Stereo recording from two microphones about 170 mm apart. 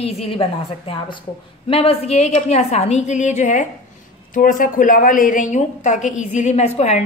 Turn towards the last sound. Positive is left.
turn(degrees=40)  # may be behind; listen again after turning